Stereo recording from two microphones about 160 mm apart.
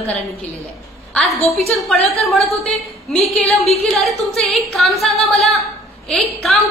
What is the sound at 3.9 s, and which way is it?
Speech, centre (ahead or behind).